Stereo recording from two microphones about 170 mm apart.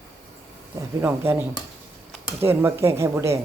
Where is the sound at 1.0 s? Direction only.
10° right (ahead or behind).